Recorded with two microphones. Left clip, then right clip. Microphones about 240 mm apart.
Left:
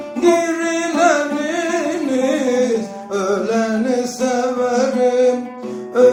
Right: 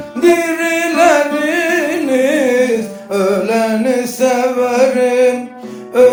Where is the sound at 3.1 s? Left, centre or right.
Right.